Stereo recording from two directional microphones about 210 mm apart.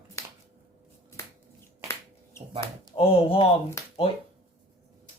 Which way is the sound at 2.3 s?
10° left (ahead or behind).